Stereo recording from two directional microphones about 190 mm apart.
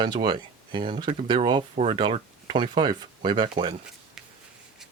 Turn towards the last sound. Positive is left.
turn(degrees=-25)  # may be behind; listen again after turning